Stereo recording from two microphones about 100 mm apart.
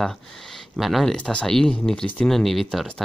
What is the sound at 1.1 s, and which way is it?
Speech, 10° left (ahead or behind).